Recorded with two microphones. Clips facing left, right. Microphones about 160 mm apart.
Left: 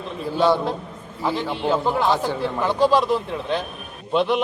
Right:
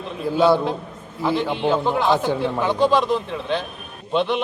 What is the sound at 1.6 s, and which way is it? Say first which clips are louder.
Speech: even; 5° left (ahead or behind).